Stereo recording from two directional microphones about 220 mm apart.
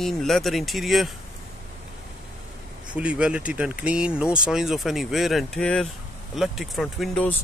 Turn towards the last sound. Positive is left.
turn(degrees=0)  # may be behind; listen again after turning